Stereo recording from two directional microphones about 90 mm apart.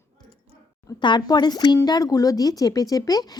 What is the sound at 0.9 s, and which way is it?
Speech, 55° left (ahead or behind).